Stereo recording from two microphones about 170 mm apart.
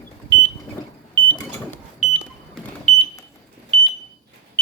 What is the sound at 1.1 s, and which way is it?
Vehicle, 10° left (ahead or behind).